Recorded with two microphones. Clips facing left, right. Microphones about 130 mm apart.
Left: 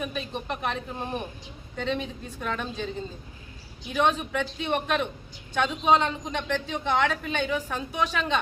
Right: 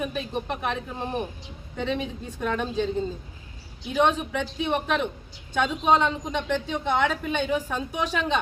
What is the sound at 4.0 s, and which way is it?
A woman's voice, 15° right (ahead or behind).